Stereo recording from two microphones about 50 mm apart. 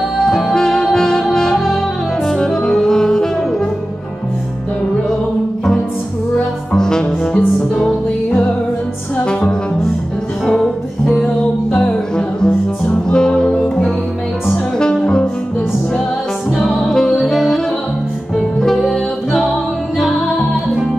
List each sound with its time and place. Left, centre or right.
0.2 s music: centre
2.2 s saxophone: centre
6.8 s music: centre
9.2 s music: centre
10.4 s music: centre
11.7 s music: centre
14.8 s music: centre
16.8 s music: centre
18.6 s music: centre
20.0 s music: centre